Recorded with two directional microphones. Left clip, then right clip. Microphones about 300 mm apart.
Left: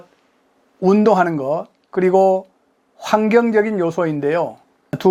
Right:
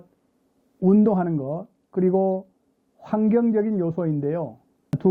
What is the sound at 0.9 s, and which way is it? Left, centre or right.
A man's voice, centre.